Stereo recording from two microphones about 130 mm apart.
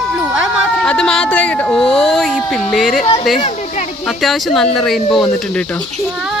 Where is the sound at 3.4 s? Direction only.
60° left (ahead or behind).